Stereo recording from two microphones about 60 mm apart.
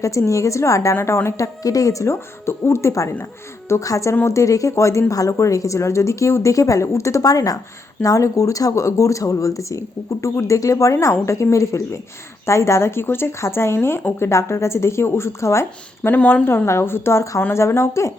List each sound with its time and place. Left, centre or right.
0.0 s speech: left
1.6 s speech: left
8.0 s speech: left
16.0 s speech: left
16.6 s speech: left